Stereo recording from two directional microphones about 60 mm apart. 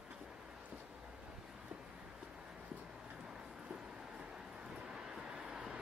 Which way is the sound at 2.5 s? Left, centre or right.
Centre.